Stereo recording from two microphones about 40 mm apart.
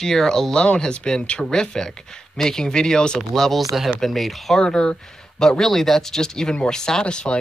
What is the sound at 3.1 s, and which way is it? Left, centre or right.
Speech, centre.